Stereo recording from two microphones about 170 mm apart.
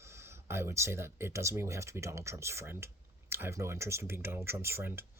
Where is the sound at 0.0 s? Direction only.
15° right (ahead or behind).